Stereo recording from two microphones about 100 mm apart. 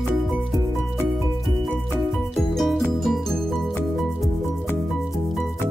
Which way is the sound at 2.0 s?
Centre (ahead or behind).